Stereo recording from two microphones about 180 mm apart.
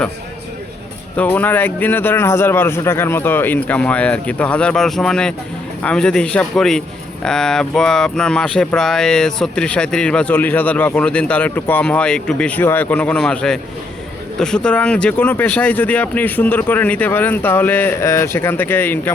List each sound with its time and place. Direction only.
1.1 s a man's voice: 10° left (ahead or behind)